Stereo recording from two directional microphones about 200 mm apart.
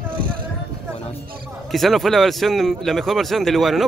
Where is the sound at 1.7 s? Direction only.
Centre (ahead or behind).